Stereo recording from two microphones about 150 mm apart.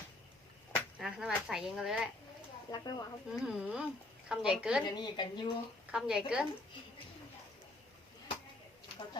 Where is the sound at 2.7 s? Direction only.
25° left (ahead or behind).